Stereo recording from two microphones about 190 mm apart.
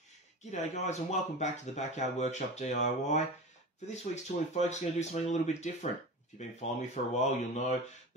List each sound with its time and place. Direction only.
0.4 s speech: 35° left (ahead or behind)